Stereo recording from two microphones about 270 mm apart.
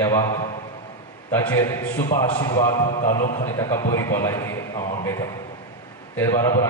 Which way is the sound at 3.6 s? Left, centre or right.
Centre.